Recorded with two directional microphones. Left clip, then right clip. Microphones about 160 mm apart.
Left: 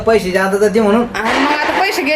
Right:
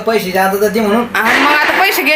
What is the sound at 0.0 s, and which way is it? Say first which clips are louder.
A woman's voice: even; centre (ahead or behind).